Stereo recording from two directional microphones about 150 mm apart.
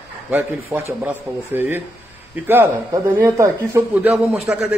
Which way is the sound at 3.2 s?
15° right (ahead or behind).